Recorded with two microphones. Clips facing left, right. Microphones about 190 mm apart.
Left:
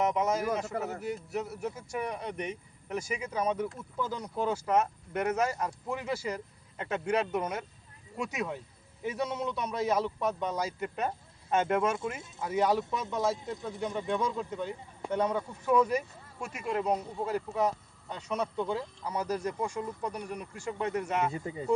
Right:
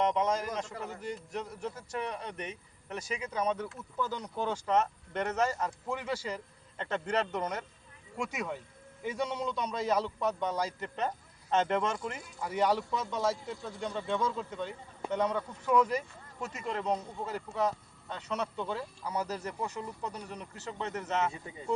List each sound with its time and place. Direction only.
0.0 s a man's voice: 10° left (ahead or behind)
0.7 s speech: 45° left (ahead or behind)
1.0 s speech: 5° left (ahead or behind)